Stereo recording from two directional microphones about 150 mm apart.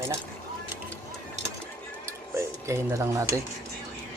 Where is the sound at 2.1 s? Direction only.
20° right (ahead or behind).